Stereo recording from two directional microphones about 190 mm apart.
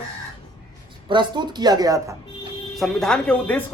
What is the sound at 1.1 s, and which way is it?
A woman's voice, 25° right (ahead or behind).